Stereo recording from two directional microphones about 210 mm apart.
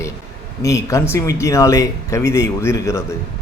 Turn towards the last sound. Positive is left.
turn(degrees=15)  # may be behind; listen again after turning